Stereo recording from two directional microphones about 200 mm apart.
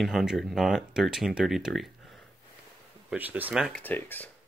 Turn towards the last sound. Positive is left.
turn(degrees=10)  # may be behind; listen again after turning